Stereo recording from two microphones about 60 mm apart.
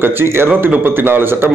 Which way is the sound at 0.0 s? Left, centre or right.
Right.